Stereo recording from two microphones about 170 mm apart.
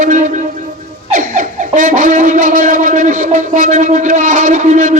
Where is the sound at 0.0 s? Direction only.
50° right (ahead or behind).